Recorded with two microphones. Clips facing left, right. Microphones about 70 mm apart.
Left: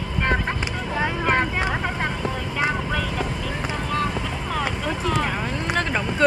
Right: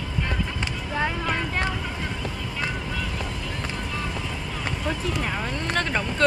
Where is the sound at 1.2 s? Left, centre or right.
Left.